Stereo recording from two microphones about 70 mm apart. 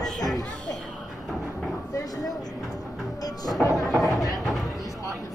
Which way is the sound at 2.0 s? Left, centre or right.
Left.